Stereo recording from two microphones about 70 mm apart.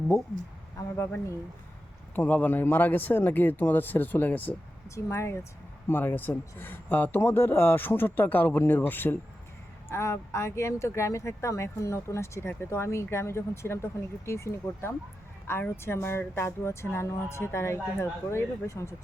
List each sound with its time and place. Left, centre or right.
0.9 s speech: left
2.1 s a man's voice: left
4.9 s a man's voice: left
9.9 s speech: left